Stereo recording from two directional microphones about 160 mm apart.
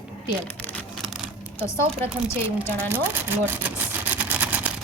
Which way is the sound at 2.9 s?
15° right (ahead or behind).